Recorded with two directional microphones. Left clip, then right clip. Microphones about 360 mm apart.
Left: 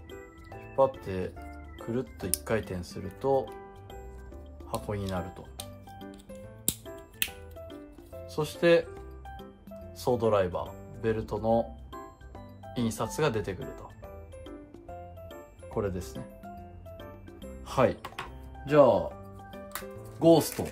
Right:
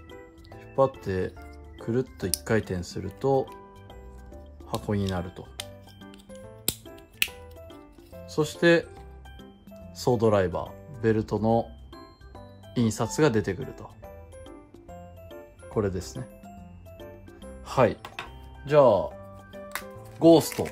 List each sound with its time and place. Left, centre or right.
1.0 s speech: right
4.6 s speech: right
5.6 s music: centre
7.5 s music: centre
8.3 s speech: right
9.9 s speech: right
12.7 s speech: right
15.3 s music: right
17.6 s music: right
18.0 s music: centre
18.7 s speech: right
19.7 s music: right